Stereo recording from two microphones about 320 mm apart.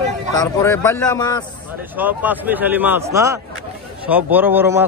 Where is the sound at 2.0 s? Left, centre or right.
Centre.